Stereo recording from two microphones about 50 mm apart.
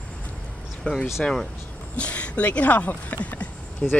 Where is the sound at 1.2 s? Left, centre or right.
Centre.